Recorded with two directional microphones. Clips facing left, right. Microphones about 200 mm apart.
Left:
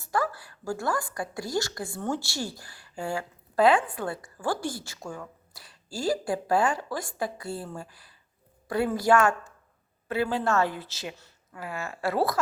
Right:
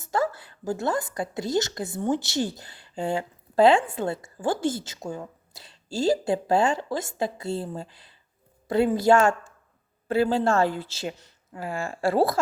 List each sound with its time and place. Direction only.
0.0 s a woman's voice: 25° right (ahead or behind)